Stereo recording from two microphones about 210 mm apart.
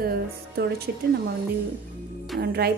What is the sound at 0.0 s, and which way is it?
Speech, 45° right (ahead or behind).